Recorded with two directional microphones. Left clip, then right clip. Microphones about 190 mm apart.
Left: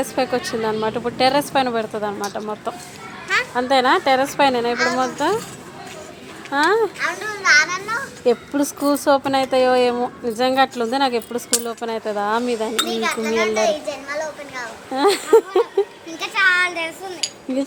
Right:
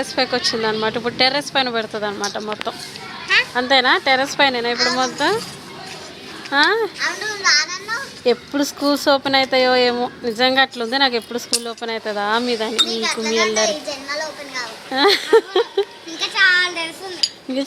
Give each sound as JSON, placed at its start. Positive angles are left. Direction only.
{"t": 0.0, "sound": "a child's voice", "side_deg": 5}
{"t": 6.5, "sound": "a child's voice", "side_deg": 0}
{"t": 16.2, "sound": "a sound", "side_deg": 20}